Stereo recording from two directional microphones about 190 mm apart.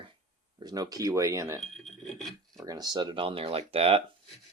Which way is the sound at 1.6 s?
Centre (ahead or behind).